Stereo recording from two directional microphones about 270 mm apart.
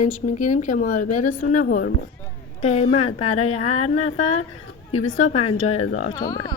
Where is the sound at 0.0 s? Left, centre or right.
Left.